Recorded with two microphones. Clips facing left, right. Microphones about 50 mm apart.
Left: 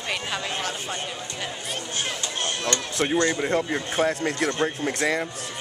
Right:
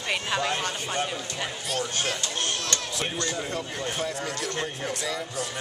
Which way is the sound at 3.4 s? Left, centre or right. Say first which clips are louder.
Left 7 dB; left.